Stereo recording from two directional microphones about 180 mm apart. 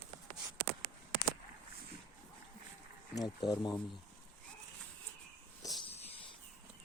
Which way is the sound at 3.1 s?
20° left (ahead or behind).